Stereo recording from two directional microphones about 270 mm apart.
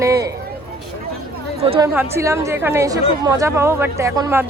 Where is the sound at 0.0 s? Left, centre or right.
Centre.